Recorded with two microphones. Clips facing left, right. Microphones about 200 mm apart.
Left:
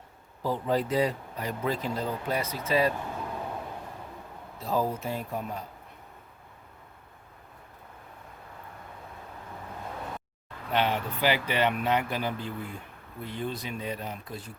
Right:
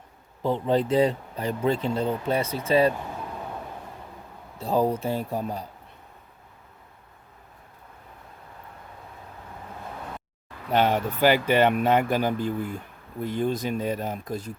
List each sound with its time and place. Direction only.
0.4 s speech: 25° right (ahead or behind)
4.6 s speech: 30° right (ahead or behind)
10.7 s speech: 45° right (ahead or behind)